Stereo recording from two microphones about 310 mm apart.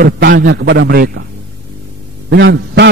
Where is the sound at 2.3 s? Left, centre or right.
Right.